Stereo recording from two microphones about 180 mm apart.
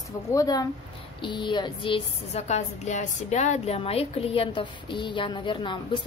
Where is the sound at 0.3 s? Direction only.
20° left (ahead or behind).